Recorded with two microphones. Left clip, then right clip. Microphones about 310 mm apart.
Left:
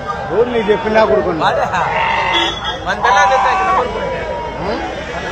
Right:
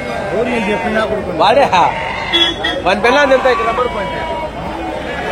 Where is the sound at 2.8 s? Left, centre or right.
Right.